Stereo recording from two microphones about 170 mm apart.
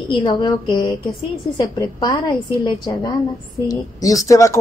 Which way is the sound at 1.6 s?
25° left (ahead or behind).